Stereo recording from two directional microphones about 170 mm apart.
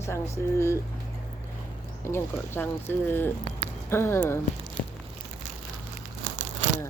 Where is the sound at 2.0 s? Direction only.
15° left (ahead or behind).